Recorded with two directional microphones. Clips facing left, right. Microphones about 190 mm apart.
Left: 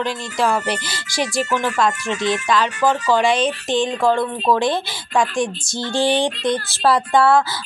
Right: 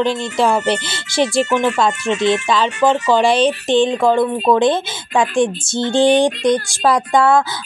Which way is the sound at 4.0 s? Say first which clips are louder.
Right 4 dB; 15° right (ahead or behind).